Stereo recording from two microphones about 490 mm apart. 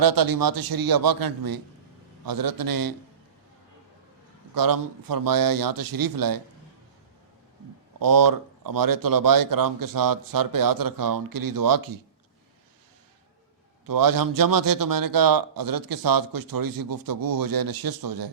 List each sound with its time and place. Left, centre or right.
0.0 s a man's voice: right
4.5 s a man's voice: right
7.9 s speech: right
13.8 s a man's voice: right